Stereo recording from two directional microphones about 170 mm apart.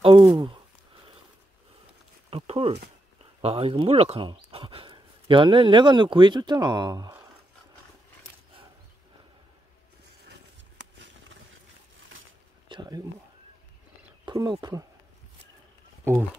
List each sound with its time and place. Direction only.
0.0 s speech: 30° right (ahead or behind)
2.3 s a sound: 35° right (ahead or behind)
3.3 s speech: 35° right (ahead or behind)
11.0 s a sound: 90° right
12.6 s speech: 25° right (ahead or behind)
14.2 s speech: 25° right (ahead or behind)